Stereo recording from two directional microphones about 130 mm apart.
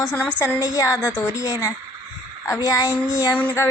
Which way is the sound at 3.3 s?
10° left (ahead or behind).